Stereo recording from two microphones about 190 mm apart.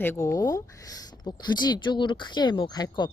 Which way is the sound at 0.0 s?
15° left (ahead or behind).